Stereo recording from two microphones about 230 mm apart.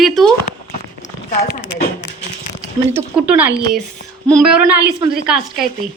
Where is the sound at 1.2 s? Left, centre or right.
Left.